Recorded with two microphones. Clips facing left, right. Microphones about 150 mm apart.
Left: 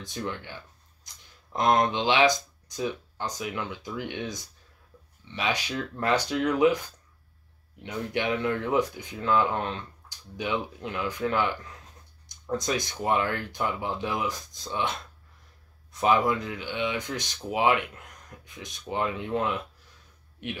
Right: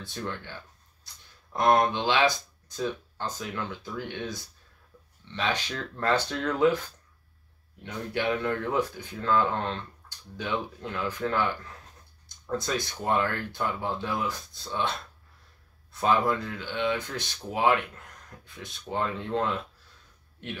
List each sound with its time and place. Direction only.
0.0 s speech: 15° left (ahead or behind)
7.8 s speech: 20° left (ahead or behind)
15.9 s speech: 15° left (ahead or behind)